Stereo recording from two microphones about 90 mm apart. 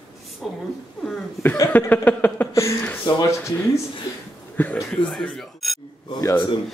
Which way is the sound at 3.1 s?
55° left (ahead or behind).